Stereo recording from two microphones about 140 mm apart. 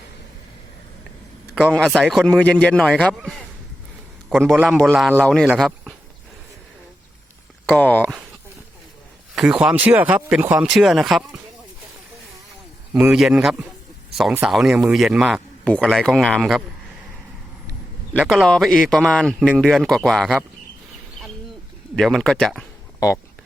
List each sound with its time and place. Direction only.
1.6 s a man's voice: 5° left (ahead or behind)
4.5 s speech: 10° right (ahead or behind)
5.2 s a man's voice: 5° left (ahead or behind)
7.7 s a man's voice: 10° left (ahead or behind)
9.3 s speech: 5° right (ahead or behind)
12.9 s speech: 10° right (ahead or behind)
15.6 s speech: 10° left (ahead or behind)
18.3 s speech: centre (ahead or behind)
21.9 s speech: 5° left (ahead or behind)
23.0 s speech: 25° left (ahead or behind)